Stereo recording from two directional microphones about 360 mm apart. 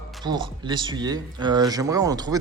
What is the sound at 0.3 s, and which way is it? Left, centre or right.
Speech, centre.